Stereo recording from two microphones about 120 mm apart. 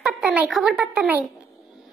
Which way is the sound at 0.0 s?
10° right (ahead or behind).